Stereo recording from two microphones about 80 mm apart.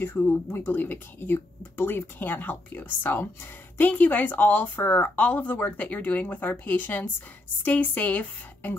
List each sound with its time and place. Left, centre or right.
0.0 s speech: left